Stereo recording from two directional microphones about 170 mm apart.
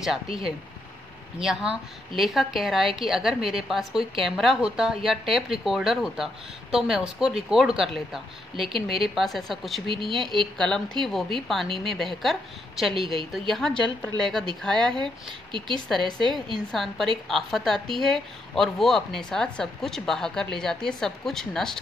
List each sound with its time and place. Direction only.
1.4 s speech: 5° right (ahead or behind)
16.2 s a woman's voice: 30° right (ahead or behind)
16.5 s speech: centre (ahead or behind)